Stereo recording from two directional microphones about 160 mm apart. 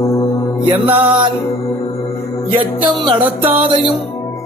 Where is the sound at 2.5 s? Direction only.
30° right (ahead or behind).